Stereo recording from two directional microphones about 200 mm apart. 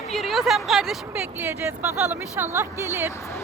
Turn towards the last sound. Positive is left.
turn(degrees=-15)  # may be behind; listen again after turning